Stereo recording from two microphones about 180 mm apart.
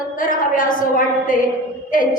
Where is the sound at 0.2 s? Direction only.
50° left (ahead or behind).